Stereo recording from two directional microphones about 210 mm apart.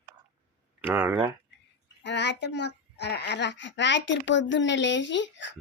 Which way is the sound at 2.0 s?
55° left (ahead or behind).